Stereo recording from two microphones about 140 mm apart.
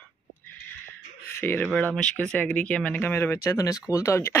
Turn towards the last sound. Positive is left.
turn(degrees=20)  # may be behind; listen again after turning